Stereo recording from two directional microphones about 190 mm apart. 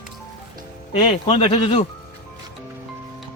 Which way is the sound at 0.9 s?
30° left (ahead or behind).